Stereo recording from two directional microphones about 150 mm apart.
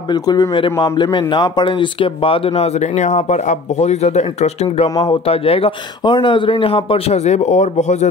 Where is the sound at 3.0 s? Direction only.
55° left (ahead or behind).